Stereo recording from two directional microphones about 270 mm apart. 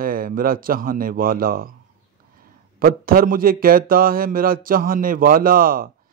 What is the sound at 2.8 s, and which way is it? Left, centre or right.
A man's voice, right.